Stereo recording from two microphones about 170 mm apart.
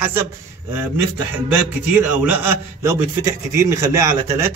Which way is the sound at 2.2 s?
10° right (ahead or behind).